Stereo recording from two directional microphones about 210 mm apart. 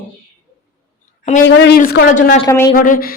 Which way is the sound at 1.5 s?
55° left (ahead or behind).